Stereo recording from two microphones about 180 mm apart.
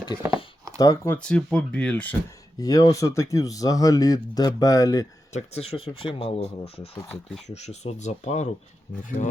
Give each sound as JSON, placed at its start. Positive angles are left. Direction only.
{"t": 0.8, "sound": "speech", "side_deg": 15}
{"t": 2.6, "sound": "speech", "side_deg": 20}
{"t": 5.3, "sound": "speech", "side_deg": 35}